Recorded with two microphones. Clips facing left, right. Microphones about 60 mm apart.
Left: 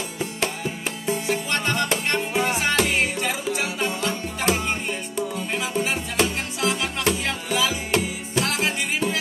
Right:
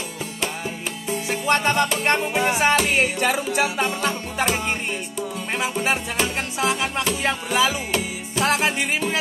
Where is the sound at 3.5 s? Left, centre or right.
Right.